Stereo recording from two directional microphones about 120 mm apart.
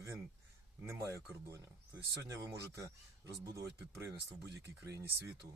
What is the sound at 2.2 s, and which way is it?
Speech, 25° right (ahead or behind).